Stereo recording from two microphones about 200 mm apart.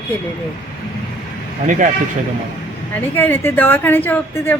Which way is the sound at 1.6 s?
40° right (ahead or behind).